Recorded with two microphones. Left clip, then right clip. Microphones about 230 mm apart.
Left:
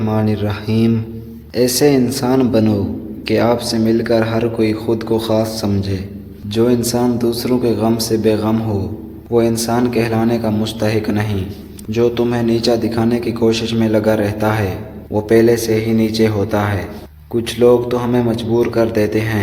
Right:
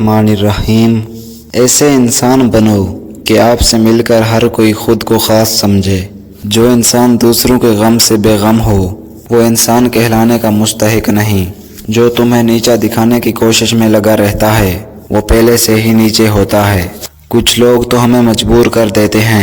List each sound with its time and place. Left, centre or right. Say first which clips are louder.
0.0 s speech: right 9 dB; right